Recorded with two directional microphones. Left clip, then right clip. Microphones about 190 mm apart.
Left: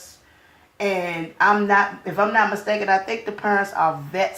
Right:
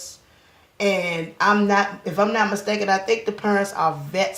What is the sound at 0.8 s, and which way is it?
Speech, 25° left (ahead or behind).